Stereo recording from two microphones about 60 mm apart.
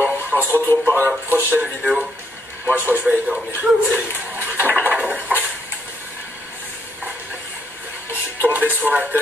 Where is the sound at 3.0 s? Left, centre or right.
Centre.